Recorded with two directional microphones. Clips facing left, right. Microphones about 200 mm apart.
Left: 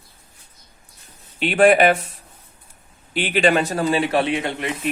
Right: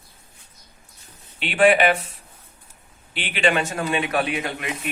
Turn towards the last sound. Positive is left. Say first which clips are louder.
# left 4 dB
turn(degrees=25)  # may be behind; listen again after turning